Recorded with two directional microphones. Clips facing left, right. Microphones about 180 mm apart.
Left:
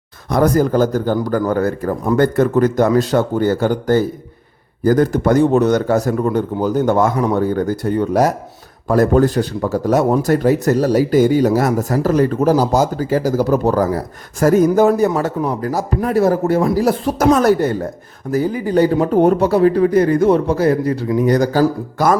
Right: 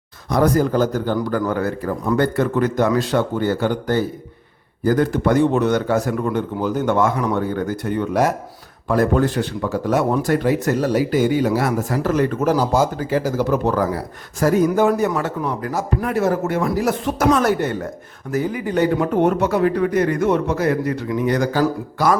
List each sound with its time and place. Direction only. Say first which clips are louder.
0.3 s speech: left 3 dB; 45° left (ahead or behind)